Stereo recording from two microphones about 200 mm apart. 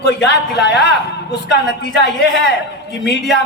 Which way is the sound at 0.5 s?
55° left (ahead or behind).